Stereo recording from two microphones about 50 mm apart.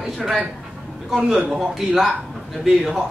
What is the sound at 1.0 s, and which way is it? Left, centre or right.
A man's voice, centre.